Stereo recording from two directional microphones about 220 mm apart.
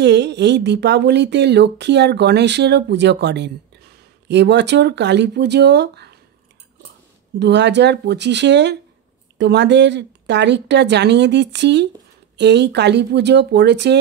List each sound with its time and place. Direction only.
0.0 s speech: 50° right (ahead or behind)
7.3 s speech: 50° right (ahead or behind)